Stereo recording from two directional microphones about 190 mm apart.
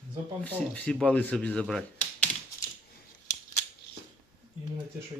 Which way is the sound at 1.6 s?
5° left (ahead or behind).